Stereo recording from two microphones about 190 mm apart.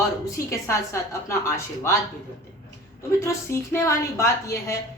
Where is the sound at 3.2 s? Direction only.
15° left (ahead or behind).